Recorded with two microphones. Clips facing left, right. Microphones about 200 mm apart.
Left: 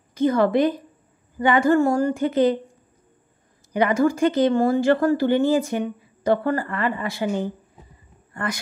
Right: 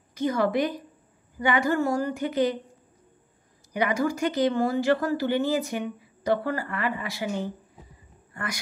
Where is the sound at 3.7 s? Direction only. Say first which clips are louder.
Left 6 dB; 55° left (ahead or behind).